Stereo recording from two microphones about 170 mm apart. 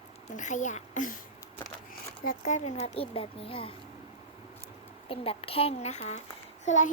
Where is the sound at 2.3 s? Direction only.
45° left (ahead or behind).